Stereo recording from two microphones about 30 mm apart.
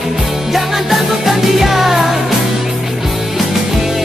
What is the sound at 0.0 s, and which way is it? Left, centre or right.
Music, centre.